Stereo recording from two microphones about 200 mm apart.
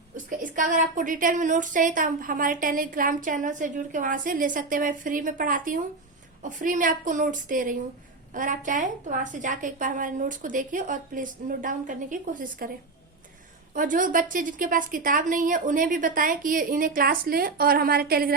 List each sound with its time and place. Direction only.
0.3 s a woman's voice: 40° right (ahead or behind)
13.7 s a woman's voice: 40° right (ahead or behind)